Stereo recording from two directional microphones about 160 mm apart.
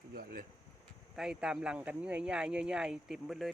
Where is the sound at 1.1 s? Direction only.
5° right (ahead or behind).